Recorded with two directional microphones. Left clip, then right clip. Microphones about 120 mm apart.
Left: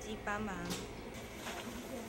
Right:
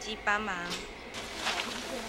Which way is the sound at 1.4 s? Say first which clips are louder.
Right 13 dB; 30° right (ahead or behind).